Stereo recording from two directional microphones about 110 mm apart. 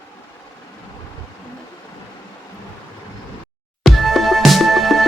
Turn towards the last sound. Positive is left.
turn(degrees=0)  # may be behind; listen again after turning